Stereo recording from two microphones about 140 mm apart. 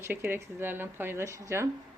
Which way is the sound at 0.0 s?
15° right (ahead or behind).